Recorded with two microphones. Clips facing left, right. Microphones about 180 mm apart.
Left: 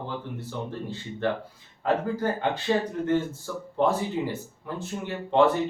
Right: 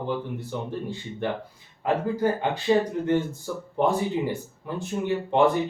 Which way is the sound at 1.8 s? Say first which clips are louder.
Right 2 dB; 10° right (ahead or behind).